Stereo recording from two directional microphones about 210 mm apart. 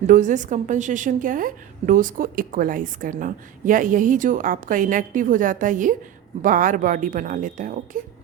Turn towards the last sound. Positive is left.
turn(degrees=-40)  # may be behind; listen again after turning